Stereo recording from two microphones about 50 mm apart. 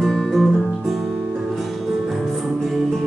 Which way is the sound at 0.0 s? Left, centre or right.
Centre.